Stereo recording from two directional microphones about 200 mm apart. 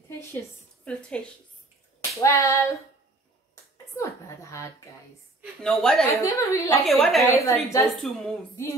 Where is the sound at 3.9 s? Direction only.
15° left (ahead or behind).